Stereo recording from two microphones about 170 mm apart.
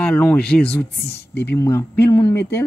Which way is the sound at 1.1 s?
75° left (ahead or behind).